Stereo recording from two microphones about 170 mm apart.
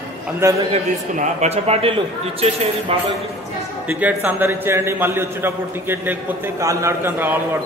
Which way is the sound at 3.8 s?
10° right (ahead or behind).